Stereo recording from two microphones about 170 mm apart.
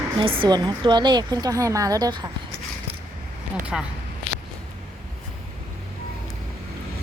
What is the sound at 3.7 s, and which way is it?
Speech, centre (ahead or behind).